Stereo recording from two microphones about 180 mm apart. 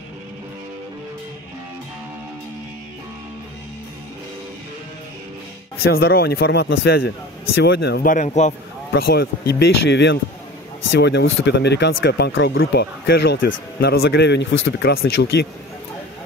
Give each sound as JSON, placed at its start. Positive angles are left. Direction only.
{"t": 5.8, "sound": "a man's voice", "side_deg": 60}
{"t": 8.1, "sound": "a man's voice", "side_deg": 40}
{"t": 8.9, "sound": "a man's voice", "side_deg": 60}